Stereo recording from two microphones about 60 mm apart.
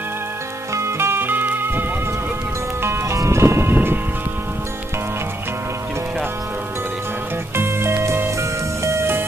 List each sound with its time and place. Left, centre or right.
0.7 s music: right
3.1 s music: right
7.5 s music: right